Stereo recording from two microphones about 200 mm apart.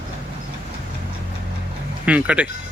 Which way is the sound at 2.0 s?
5° right (ahead or behind).